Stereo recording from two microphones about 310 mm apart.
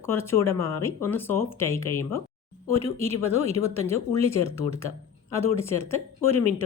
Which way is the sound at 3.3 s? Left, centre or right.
Right.